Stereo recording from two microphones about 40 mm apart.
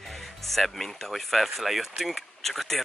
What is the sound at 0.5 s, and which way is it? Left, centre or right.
Speech, centre.